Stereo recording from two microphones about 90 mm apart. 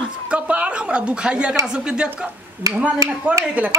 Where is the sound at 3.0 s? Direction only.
35° right (ahead or behind).